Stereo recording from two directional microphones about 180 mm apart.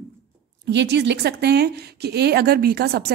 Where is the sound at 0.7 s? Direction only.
70° right (ahead or behind).